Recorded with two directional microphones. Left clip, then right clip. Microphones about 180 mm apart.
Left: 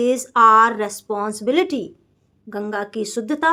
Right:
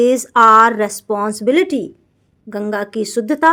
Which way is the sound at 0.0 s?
30° right (ahead or behind).